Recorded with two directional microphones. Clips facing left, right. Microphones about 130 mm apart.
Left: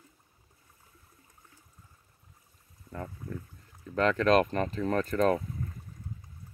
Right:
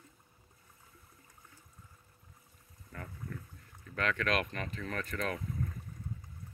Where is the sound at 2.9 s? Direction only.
25° left (ahead or behind).